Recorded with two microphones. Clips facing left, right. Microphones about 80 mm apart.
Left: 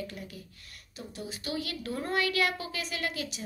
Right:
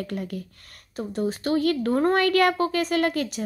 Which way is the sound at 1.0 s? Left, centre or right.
Right.